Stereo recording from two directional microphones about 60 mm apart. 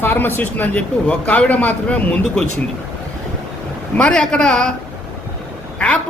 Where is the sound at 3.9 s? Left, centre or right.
Centre.